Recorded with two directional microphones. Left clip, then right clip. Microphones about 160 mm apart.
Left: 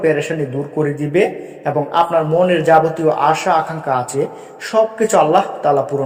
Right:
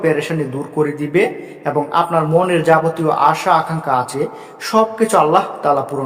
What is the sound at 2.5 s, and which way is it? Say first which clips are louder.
Speech: left 1 dB; 10° right (ahead or behind).